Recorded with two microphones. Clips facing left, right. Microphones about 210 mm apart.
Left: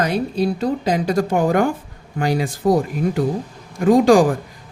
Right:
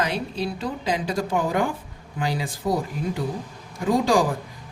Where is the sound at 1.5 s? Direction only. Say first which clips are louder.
Left 7 dB; 70° left (ahead or behind).